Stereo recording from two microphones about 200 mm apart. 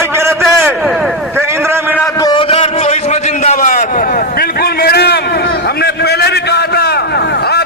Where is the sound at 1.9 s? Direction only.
15° left (ahead or behind).